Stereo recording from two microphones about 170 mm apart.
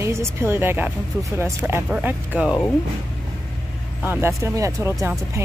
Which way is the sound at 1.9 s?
10° right (ahead or behind).